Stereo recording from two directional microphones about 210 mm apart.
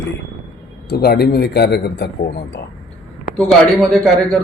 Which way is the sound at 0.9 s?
50° left (ahead or behind).